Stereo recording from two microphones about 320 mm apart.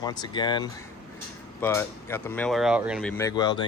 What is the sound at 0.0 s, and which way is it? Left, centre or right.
Speech, centre.